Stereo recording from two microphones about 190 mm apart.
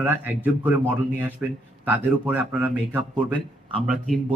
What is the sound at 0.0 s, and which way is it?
A man's voice, 10° right (ahead or behind).